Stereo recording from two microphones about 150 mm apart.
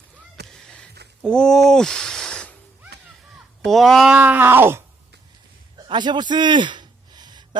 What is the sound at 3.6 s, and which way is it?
Speech, centre (ahead or behind).